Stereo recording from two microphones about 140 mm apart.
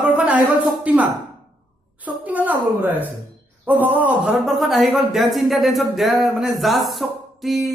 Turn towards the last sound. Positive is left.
turn(degrees=0)  # may be behind; listen again after turning